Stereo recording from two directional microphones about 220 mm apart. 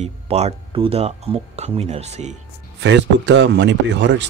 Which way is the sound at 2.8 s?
55° right (ahead or behind).